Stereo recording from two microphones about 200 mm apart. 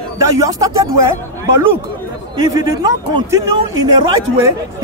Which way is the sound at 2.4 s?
20° right (ahead or behind).